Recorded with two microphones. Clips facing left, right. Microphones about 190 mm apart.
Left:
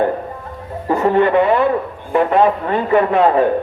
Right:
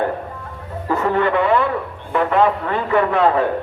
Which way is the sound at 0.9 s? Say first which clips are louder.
Left 4 dB; 25° left (ahead or behind).